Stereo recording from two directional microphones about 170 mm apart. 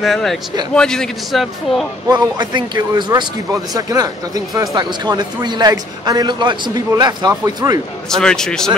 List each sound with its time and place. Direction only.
0.0 s a man's voice: centre (ahead or behind)
2.0 s a man's voice: 25° right (ahead or behind)
8.1 s a man's voice: 5° left (ahead or behind)